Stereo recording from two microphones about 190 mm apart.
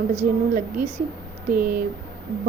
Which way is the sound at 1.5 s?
10° right (ahead or behind).